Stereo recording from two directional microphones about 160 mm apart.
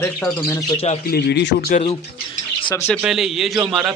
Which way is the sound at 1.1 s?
90° left.